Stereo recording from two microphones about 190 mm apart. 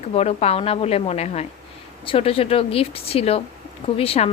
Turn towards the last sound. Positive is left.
turn(degrees=30)  # may be behind; listen again after turning